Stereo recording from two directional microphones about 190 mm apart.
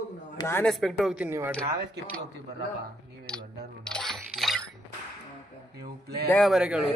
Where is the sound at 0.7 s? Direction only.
Centre (ahead or behind).